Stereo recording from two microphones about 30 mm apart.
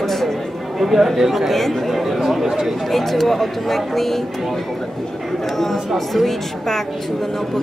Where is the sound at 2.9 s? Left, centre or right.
Centre.